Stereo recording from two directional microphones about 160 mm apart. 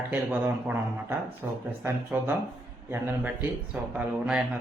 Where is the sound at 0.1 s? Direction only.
10° right (ahead or behind).